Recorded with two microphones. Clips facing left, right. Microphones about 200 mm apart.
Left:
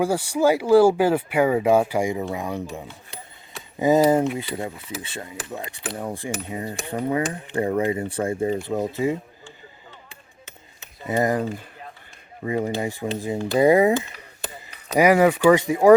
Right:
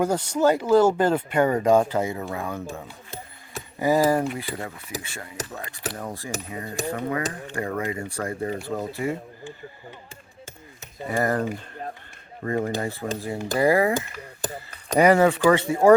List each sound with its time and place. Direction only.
0.0 s speech: 10° left (ahead or behind)
3.8 s cutlery: 20° left (ahead or behind)
5.9 s speech: 15° left (ahead or behind)
6.5 s cutlery: 20° left (ahead or behind)
11.1 s speech: 15° left (ahead or behind)
13.6 s cutlery: 20° left (ahead or behind)
14.4 s a sound: 45° right (ahead or behind)
14.9 s speech: 10° left (ahead or behind)